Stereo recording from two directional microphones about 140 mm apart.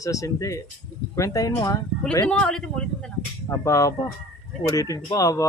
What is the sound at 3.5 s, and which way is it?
Speech, 25° left (ahead or behind).